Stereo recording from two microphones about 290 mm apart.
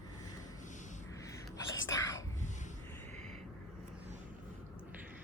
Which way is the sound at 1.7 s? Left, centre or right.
Left.